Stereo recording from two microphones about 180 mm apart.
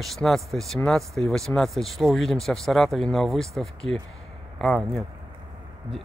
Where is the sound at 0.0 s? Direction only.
Centre (ahead or behind).